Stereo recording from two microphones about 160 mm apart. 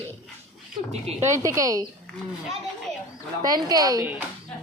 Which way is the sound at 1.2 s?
20° right (ahead or behind).